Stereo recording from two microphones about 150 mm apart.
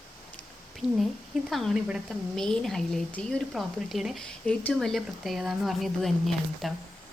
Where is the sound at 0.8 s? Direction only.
Centre (ahead or behind).